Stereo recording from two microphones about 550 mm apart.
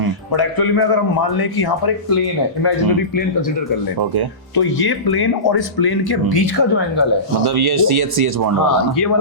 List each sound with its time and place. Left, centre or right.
0.3 s speech: left
4.5 s speech: left
7.4 s speech: right